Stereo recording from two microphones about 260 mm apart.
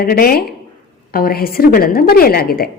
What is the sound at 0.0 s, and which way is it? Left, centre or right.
A woman's voice, left.